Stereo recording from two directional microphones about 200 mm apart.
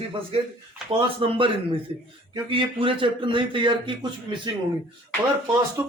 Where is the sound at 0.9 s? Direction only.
30° right (ahead or behind).